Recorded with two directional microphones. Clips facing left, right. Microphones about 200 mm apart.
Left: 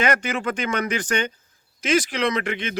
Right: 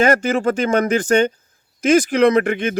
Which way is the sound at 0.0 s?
45° right (ahead or behind).